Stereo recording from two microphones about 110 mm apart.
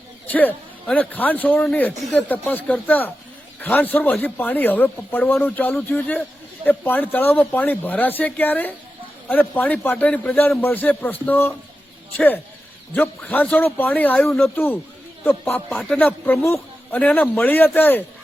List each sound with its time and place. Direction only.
0.3 s a man's voice: 15° left (ahead or behind)
12.9 s a man's voice: 15° left (ahead or behind)